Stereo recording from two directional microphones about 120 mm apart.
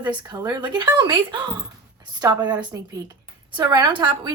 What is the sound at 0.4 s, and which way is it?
Speech, 35° right (ahead or behind).